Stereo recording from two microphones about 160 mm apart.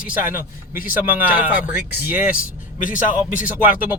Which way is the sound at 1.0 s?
10° right (ahead or behind).